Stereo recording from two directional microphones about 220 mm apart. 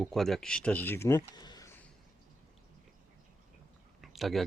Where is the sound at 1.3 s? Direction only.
20° left (ahead or behind).